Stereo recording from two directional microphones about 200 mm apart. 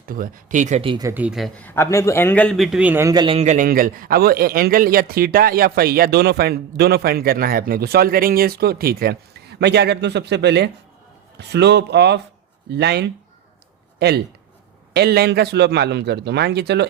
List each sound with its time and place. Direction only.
0.0 s speech: 45° right (ahead or behind); by 1.0 s 25° right (ahead or behind)
1.0 s a man's voice: 10° right (ahead or behind)
3.3 s a man's voice: 35° right (ahead or behind); by 13.1 s 55° right (ahead or behind)
14.9 s a man's voice: 55° right (ahead or behind)